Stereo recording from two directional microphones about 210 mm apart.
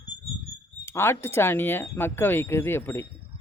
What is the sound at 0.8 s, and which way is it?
Speech, 10° left (ahead or behind).